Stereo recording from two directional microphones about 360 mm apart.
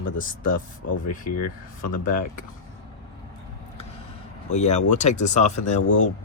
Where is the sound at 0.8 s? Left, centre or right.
Left.